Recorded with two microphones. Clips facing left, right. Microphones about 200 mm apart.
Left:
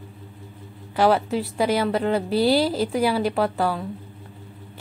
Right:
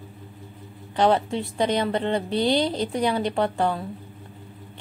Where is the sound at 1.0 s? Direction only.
5° left (ahead or behind).